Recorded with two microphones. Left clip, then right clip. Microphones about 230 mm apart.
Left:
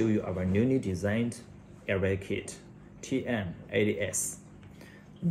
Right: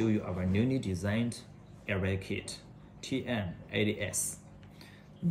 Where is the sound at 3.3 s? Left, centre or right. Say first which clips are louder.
Left 3 dB; centre.